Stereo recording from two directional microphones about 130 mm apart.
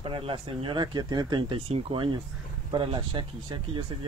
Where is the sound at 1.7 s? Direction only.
45° right (ahead or behind).